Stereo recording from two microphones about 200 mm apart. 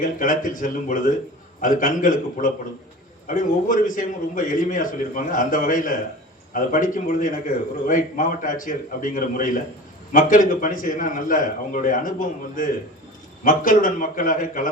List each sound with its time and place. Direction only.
0.0 s a man's voice: 40° left (ahead or behind)